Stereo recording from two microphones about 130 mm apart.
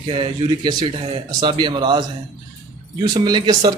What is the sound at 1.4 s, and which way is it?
Speech, 35° right (ahead or behind).